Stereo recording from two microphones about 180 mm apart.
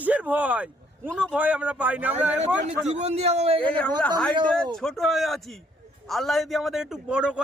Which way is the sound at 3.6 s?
5° left (ahead or behind).